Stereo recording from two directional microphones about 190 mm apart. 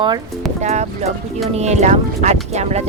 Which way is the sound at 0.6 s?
35° right (ahead or behind).